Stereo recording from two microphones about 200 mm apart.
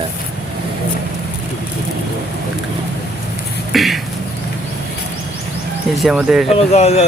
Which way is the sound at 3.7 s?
Centre (ahead or behind).